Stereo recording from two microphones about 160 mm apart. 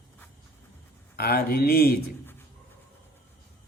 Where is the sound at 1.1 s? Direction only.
75° left (ahead or behind).